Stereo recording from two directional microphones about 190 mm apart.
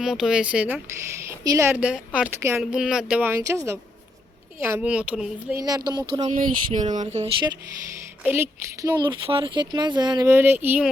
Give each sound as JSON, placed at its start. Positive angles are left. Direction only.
{"t": 0.0, "sound": "a woman's voice", "side_deg": -5}
{"t": 5.5, "sound": "speech", "side_deg": -20}
{"t": 6.2, "sound": "speech", "side_deg": -45}
{"t": 8.2, "sound": "a woman's voice", "side_deg": -10}
{"t": 9.2, "sound": "speech", "side_deg": -30}